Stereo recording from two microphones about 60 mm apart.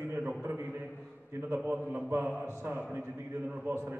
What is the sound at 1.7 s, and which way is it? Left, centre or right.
A man's voice, right.